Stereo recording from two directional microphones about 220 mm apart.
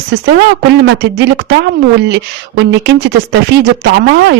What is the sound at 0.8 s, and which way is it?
A woman's voice, 50° right (ahead or behind).